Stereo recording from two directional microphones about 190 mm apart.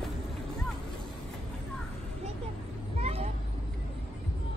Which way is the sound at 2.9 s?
35° right (ahead or behind).